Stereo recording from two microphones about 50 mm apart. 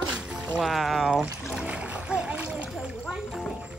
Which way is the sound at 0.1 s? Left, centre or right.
Centre.